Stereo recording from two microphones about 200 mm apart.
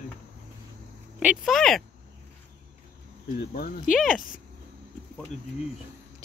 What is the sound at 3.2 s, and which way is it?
Speech, 50° left (ahead or behind).